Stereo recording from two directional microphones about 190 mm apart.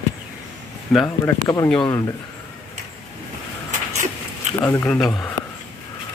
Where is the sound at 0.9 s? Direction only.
Centre (ahead or behind).